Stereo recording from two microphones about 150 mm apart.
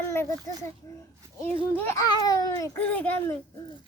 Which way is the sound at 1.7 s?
15° left (ahead or behind).